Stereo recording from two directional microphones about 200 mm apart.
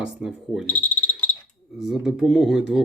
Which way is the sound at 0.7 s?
10° left (ahead or behind).